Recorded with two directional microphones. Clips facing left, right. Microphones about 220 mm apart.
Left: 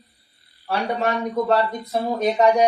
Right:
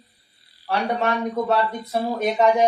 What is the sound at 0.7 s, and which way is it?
Speech, centre (ahead or behind).